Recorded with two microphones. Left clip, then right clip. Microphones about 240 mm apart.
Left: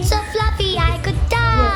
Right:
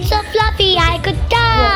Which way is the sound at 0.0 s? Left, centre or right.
Centre.